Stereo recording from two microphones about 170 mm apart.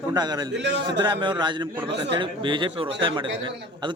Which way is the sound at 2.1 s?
30° right (ahead or behind).